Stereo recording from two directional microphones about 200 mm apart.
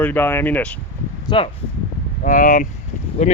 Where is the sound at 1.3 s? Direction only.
20° left (ahead or behind).